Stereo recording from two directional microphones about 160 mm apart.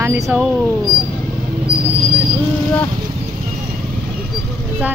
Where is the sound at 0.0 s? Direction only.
15° right (ahead or behind).